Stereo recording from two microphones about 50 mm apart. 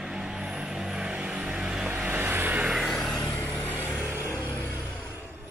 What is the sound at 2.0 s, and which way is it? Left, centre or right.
Vehicle, right.